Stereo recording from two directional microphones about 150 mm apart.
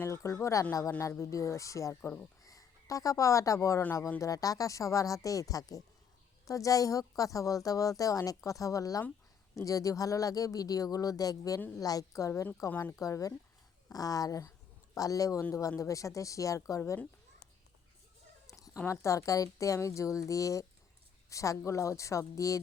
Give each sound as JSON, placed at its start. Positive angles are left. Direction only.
{"t": 0.0, "sound": "a woman's voice", "side_deg": 20}
{"t": 2.0, "sound": "cricket", "side_deg": 15}
{"t": 2.4, "sound": "a woman's voice", "side_deg": 25}
{"t": 18.4, "sound": "chicken", "side_deg": 20}
{"t": 18.8, "sound": "a woman's voice", "side_deg": 20}